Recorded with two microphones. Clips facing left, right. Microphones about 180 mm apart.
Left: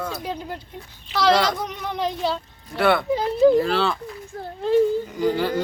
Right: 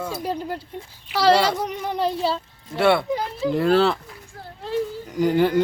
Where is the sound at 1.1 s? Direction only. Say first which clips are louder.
Right 1 dB; 10° right (ahead or behind).